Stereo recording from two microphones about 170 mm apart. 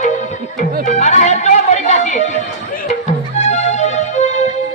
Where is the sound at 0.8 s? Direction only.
45° left (ahead or behind).